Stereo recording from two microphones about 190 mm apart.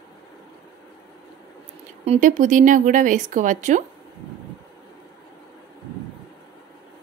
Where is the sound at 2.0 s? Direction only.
40° right (ahead or behind).